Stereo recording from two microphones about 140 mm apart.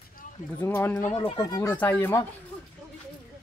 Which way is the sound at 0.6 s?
15° left (ahead or behind).